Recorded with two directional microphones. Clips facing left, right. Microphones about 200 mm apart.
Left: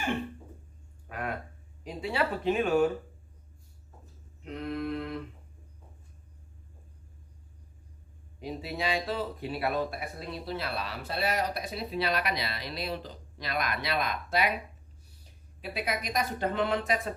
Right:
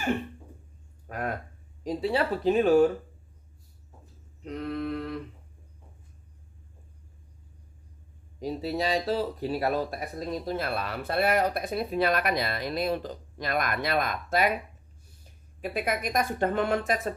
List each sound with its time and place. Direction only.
1.0 s a sound: 40° right (ahead or behind)
1.8 s speech: 40° right (ahead or behind)
4.4 s mantra: 40° right (ahead or behind)
8.4 s speech: 40° right (ahead or behind)